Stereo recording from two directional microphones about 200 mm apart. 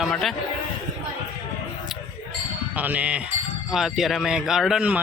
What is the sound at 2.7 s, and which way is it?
Speech, 10° right (ahead or behind).